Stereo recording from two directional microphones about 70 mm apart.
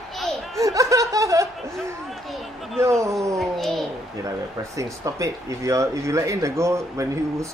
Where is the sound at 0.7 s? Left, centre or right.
Right.